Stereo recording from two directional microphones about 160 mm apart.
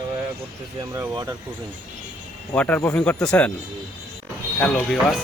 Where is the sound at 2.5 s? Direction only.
10° left (ahead or behind).